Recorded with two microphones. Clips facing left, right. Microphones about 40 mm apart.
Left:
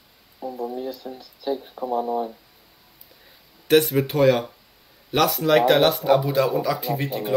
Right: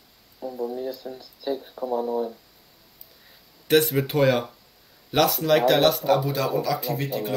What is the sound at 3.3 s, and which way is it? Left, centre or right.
Speech, centre.